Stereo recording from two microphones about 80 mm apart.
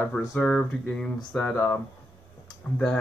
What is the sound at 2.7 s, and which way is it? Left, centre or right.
Speech, centre.